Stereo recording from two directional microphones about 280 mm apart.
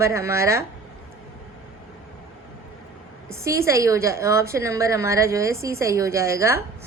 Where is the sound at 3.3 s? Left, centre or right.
Centre.